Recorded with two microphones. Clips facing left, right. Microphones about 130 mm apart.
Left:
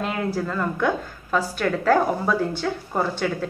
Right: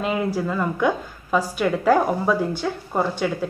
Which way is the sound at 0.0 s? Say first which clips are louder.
Right 2 dB; 5° right (ahead or behind).